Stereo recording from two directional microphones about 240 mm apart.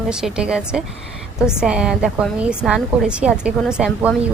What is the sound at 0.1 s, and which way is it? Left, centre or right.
A woman's voice, centre.